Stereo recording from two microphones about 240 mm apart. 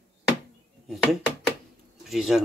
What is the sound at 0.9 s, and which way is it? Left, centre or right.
Speech, centre.